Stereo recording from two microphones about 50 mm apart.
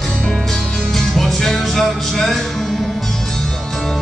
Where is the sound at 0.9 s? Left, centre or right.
Centre.